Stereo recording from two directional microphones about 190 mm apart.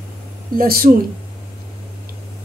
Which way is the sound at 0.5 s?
50° right (ahead or behind).